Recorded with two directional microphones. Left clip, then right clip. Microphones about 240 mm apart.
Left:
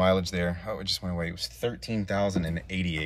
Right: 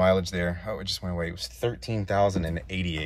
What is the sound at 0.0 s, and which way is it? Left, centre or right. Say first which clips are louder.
Speech: right 2 dB; centre.